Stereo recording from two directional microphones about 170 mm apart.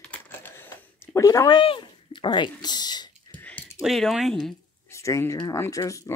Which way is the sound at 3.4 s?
10° left (ahead or behind).